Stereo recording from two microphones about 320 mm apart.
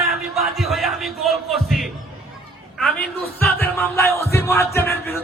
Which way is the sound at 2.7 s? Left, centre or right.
Centre.